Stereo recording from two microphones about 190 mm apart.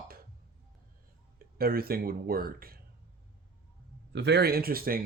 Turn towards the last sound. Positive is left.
turn(degrees=-50)  # may be behind; listen again after turning